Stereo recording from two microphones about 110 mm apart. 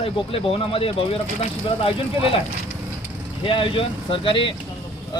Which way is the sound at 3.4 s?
50° left (ahead or behind).